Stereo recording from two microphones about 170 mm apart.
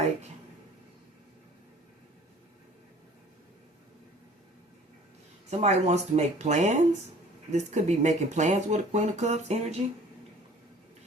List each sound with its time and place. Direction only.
5.5 s speech: 40° right (ahead or behind)